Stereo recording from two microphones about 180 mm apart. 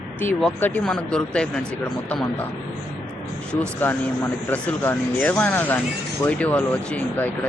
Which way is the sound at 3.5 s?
10° left (ahead or behind).